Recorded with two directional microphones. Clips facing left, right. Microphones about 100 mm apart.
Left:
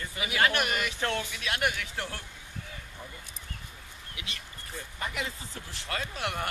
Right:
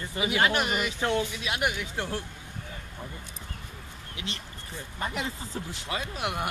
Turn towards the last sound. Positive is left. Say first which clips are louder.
# right 2 dB
turn(degrees=-15)  # may be behind; listen again after turning